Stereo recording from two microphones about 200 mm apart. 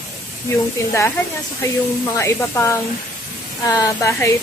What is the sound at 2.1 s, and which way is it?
Speech, 15° left (ahead or behind).